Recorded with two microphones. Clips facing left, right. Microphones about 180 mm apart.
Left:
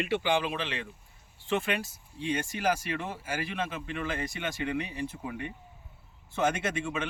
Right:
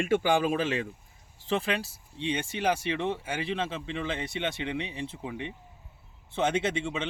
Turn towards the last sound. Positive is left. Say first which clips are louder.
# right 3 dB
turn(degrees=-25)  # may be behind; listen again after turning